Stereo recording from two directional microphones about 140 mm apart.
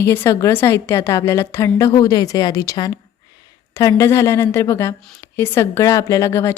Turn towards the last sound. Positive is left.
turn(degrees=20)  # may be behind; listen again after turning